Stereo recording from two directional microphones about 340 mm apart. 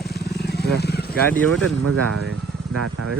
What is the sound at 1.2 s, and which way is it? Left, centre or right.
Speech, centre.